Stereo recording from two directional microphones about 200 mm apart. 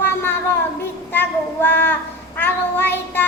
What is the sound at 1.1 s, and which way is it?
Child singing, 10° left (ahead or behind).